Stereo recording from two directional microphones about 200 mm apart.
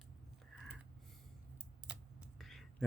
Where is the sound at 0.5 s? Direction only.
Centre (ahead or behind).